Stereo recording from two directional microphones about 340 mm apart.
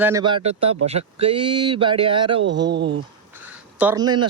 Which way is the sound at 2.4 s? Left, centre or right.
Right.